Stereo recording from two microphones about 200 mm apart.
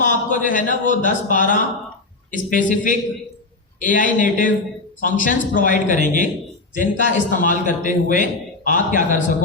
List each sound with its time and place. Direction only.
0.0 s a man's voice: 40° left (ahead or behind)